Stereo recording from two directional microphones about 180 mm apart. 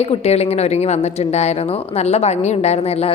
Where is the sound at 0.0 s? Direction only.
35° left (ahead or behind).